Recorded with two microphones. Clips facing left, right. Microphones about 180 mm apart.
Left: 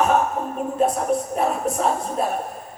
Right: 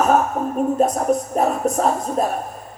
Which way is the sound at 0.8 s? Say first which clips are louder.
Left 1 dB; 40° right (ahead or behind).